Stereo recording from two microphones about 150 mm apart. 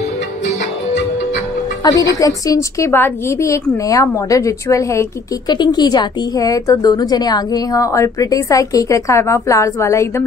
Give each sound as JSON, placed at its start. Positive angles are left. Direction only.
{"t": 1.8, "sound": "a woman's voice", "side_deg": 25}